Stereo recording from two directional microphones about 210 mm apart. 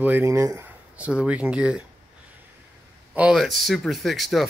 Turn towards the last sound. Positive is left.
turn(degrees=0)  # may be behind; listen again after turning